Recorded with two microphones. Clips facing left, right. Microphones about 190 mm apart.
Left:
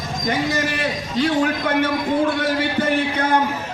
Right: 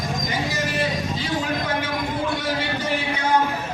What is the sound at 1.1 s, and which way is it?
Speech, 60° left (ahead or behind).